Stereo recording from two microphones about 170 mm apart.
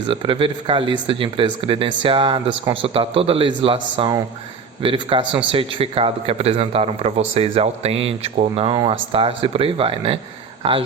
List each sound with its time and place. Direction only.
0.1 s a man's voice: 30° right (ahead or behind)